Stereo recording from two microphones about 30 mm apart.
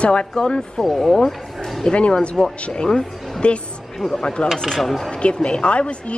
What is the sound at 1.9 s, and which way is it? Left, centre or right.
Speech, left.